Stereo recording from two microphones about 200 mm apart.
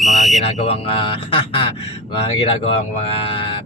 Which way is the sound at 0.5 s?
35° left (ahead or behind).